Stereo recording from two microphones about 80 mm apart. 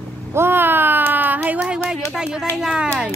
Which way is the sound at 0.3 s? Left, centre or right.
Right.